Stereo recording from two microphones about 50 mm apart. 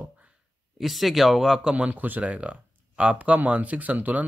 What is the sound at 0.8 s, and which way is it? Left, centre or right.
Speech, centre.